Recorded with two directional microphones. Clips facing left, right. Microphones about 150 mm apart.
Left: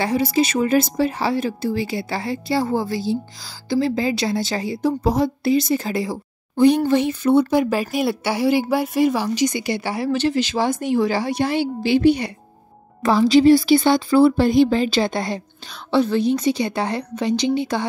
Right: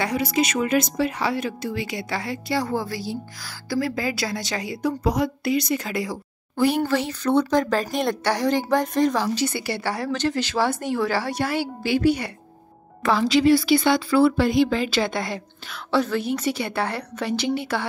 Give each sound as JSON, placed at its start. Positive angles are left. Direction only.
{"t": 0.0, "sound": "a woman's voice", "side_deg": 30}
{"t": 7.2, "sound": "speech", "side_deg": 10}
{"t": 11.8, "sound": "a woman's voice", "side_deg": 25}
{"t": 13.4, "sound": "a woman's voice", "side_deg": 25}